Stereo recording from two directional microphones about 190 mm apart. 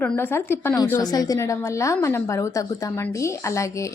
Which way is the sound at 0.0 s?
10° left (ahead or behind).